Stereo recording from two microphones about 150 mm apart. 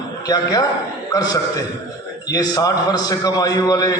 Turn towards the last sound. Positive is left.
turn(degrees=25)  # may be behind; listen again after turning